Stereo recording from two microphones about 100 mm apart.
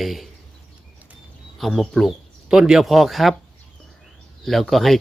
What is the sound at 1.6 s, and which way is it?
A man's voice, centre (ahead or behind).